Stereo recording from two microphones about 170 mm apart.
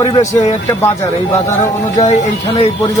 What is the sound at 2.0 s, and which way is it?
Speech, 45° left (ahead or behind).